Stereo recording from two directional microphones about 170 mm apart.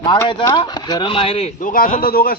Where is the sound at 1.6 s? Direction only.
55° left (ahead or behind).